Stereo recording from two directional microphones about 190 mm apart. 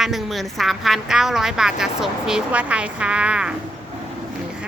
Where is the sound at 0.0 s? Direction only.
Centre (ahead or behind).